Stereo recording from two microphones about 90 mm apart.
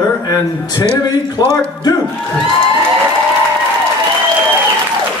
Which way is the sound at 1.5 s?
45° left (ahead or behind).